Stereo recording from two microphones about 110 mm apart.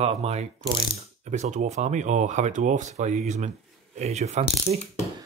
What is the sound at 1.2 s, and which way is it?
Speech, 90° right.